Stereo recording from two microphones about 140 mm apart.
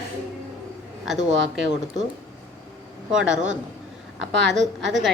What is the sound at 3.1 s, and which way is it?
Speech, 5° right (ahead or behind).